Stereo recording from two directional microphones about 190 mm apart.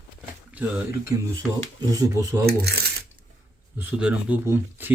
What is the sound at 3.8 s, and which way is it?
Speech, 5° right (ahead or behind).